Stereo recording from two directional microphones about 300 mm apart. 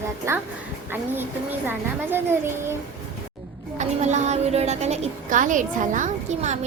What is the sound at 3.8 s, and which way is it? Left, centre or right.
A woman's voice, right.